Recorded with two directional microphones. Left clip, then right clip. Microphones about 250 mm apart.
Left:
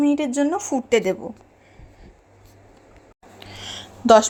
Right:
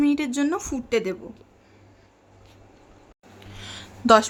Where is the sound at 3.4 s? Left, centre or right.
Centre.